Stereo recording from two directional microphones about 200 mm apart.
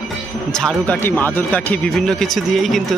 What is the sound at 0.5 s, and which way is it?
Speech, 5° left (ahead or behind).